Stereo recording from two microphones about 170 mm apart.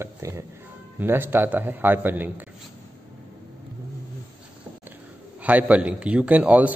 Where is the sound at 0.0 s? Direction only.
15° right (ahead or behind).